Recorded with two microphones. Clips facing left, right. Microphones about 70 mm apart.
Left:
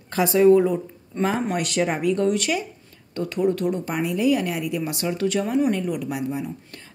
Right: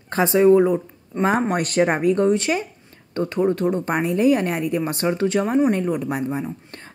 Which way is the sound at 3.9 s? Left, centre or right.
Right.